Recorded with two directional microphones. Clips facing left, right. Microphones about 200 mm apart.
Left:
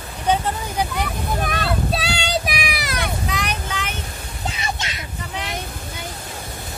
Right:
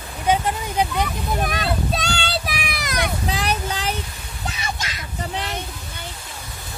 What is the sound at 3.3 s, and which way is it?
Vehicle, 30° right (ahead or behind).